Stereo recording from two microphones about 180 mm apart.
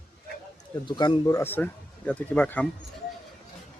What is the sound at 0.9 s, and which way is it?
Speech, 25° left (ahead or behind).